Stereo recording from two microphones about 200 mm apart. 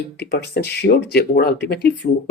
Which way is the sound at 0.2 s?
55° left (ahead or behind).